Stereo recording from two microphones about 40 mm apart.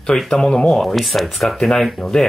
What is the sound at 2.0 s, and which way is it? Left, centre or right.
Speech, centre.